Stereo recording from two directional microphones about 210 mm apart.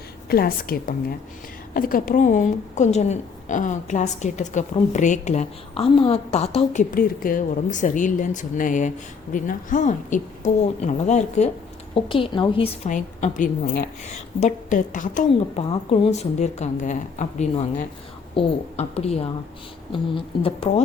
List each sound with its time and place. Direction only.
0.3 s a woman's voice: 45° left (ahead or behind); by 6.8 s 30° left (ahead or behind)
6.9 s a woman's voice: 40° left (ahead or behind)